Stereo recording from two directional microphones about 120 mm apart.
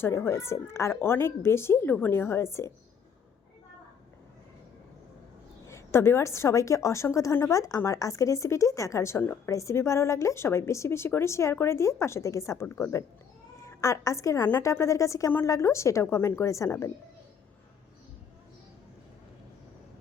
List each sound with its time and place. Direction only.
0.0 s speech: 20° left (ahead or behind)
5.6 s speech: 20° left (ahead or behind)